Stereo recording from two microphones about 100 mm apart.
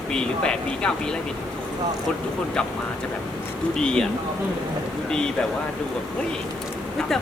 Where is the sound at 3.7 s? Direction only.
5° left (ahead or behind).